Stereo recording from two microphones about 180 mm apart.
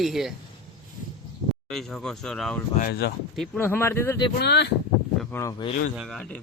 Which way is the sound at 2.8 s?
60° left (ahead or behind).